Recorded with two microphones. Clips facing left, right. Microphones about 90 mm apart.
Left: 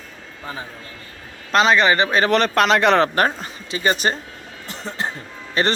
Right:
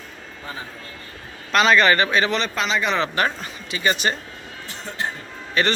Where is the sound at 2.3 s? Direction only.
55° left (ahead or behind).